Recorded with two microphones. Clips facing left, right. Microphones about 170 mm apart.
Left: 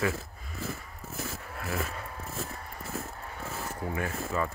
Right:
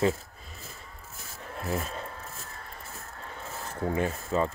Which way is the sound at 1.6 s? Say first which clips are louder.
Right 2 dB; 25° right (ahead or behind).